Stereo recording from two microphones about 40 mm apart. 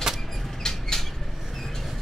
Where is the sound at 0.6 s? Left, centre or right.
Centre.